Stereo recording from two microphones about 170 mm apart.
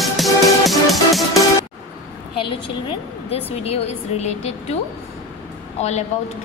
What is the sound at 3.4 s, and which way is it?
A woman's voice, 35° left (ahead or behind).